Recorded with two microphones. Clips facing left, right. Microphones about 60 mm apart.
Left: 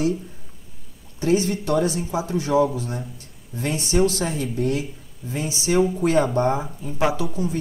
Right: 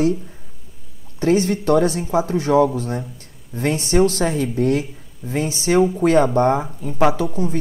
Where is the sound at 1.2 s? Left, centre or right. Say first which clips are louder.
Right 3 dB; right.